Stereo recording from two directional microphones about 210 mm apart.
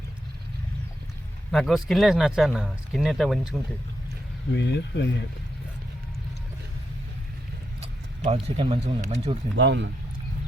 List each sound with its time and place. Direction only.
1.5 s speech: centre (ahead or behind)
4.5 s speech: 55° left (ahead or behind)
8.2 s speech: 30° right (ahead or behind)
9.6 s speech: 60° right (ahead or behind)